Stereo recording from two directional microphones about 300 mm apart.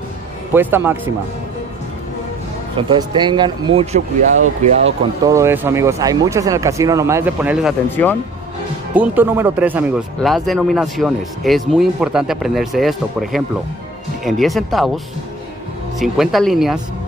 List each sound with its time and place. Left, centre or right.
0.5 s speech: centre
2.9 s speech: centre
5.2 s speech: centre
7.9 s speech: centre
8.9 s speech: centre
16.0 s speech: centre